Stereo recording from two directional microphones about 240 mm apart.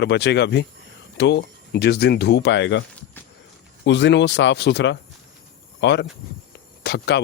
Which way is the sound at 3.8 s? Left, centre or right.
Left.